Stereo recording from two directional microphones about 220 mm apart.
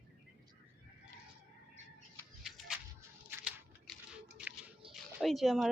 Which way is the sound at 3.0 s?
5° right (ahead or behind).